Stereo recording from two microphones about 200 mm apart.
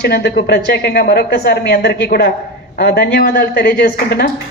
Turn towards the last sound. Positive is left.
turn(degrees=50)  # may be behind; listen again after turning